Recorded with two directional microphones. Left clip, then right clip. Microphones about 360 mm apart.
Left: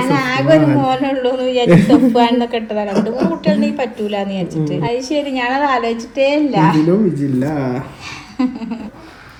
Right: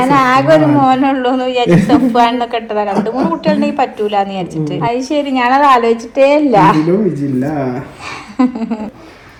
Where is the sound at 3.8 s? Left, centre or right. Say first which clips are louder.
Right 6 dB; right.